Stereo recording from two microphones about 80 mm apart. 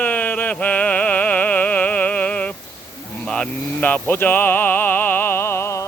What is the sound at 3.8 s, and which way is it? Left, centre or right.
Music, left.